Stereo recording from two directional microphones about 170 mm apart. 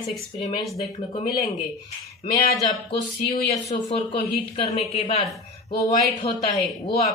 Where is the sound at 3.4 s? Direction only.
35° left (ahead or behind).